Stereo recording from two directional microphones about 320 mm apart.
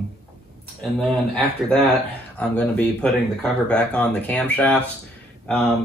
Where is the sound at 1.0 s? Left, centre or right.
Centre.